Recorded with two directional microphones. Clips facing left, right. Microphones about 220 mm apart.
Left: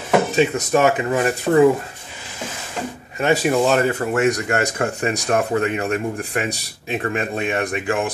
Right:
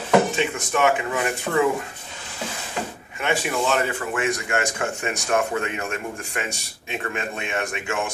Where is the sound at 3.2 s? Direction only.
40° left (ahead or behind).